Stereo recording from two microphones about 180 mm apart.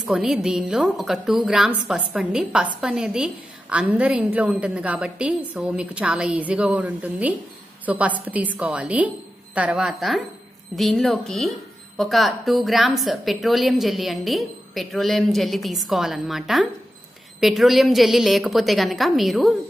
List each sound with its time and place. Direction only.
0.0 s a woman's voice: centre (ahead or behind)